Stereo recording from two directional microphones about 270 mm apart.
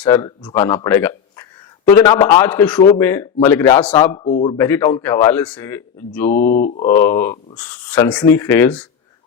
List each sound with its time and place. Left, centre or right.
0.0 s speech: centre
4.5 s speech: centre
6.3 s mantra: left
6.8 s speech: centre